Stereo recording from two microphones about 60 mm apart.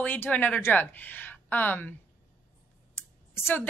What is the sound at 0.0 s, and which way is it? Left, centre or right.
A woman's voice, left.